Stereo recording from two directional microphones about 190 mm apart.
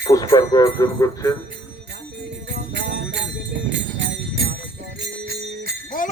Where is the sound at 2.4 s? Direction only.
65° right (ahead or behind).